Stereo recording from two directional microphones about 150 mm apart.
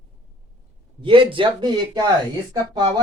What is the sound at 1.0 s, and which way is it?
Speech, 35° right (ahead or behind).